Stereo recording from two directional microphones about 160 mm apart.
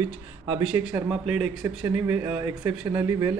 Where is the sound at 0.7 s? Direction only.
5° right (ahead or behind).